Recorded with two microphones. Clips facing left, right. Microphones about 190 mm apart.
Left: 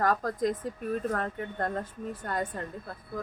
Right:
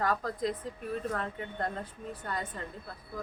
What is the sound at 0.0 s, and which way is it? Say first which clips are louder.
Speech: left 4 dB; 45° left (ahead or behind).